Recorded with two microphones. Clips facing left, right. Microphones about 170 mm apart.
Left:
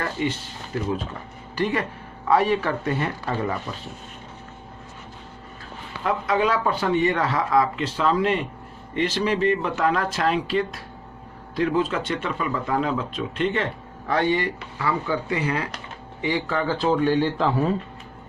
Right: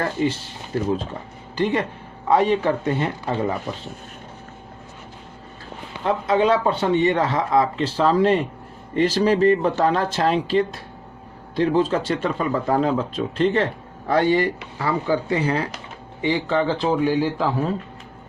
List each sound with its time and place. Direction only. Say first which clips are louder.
0.0 s speech: right 4 dB; 35° right (ahead or behind)
6.0 s speech: right 3 dB; 30° right (ahead or behind); by 17.7 s 5° right (ahead or behind)